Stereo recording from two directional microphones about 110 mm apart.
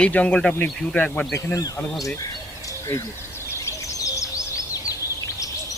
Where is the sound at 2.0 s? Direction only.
30° left (ahead or behind).